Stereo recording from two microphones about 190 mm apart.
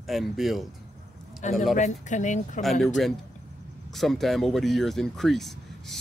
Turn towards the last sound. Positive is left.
turn(degrees=0)  # may be behind; listen again after turning